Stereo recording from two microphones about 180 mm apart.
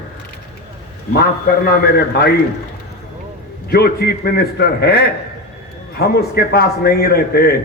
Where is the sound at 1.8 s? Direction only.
65° left (ahead or behind).